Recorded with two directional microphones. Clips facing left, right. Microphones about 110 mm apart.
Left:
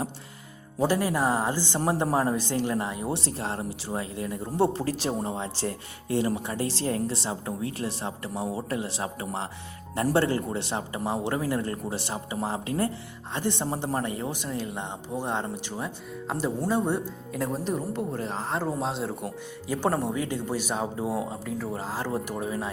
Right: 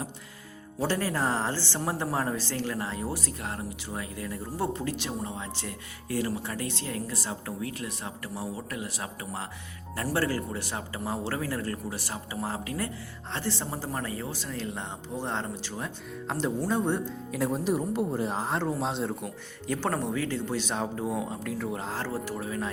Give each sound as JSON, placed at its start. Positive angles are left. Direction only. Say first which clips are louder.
{"t": 0.8, "sound": "speech", "louder": "left 4 dB", "side_deg": 15}
{"t": 3.1, "sound": "speech", "louder": "left 4 dB", "side_deg": 30}
{"t": 17.7, "sound": "a woman's voice", "louder": "right 2 dB", "side_deg": -5}
{"t": 18.5, "sound": "speech", "louder": "left 4 dB", "side_deg": 0}
{"t": 22.0, "sound": "speech", "louder": "left 3 dB", "side_deg": 15}